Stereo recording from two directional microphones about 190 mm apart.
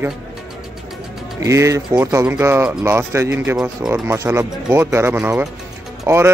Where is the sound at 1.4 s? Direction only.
15° right (ahead or behind).